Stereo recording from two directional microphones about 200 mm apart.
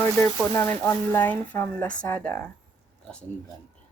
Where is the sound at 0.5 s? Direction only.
10° left (ahead or behind).